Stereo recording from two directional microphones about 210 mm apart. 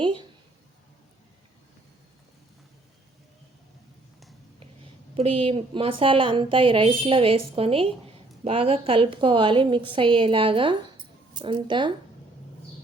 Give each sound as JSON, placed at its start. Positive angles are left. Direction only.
{"t": 5.1, "sound": "a woman's voice", "side_deg": -25}